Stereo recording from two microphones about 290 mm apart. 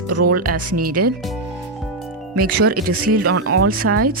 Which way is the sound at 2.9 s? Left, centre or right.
Right.